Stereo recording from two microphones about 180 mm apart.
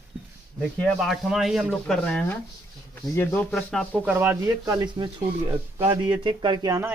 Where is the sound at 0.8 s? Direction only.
Centre (ahead or behind).